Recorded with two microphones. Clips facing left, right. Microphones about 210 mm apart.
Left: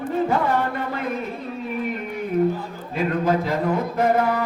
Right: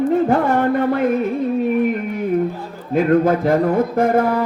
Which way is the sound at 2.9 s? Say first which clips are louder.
Right 7 dB; 55° right (ahead or behind).